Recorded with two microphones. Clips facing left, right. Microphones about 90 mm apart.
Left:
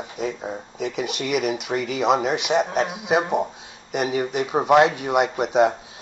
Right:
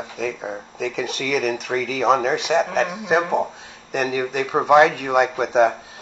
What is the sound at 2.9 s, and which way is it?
Speech, 35° right (ahead or behind).